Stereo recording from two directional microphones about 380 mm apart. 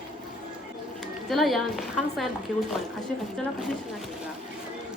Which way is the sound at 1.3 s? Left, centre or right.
Centre.